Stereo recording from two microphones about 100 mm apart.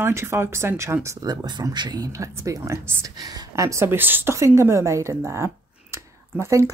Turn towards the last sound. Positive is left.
turn(degrees=-25)  # may be behind; listen again after turning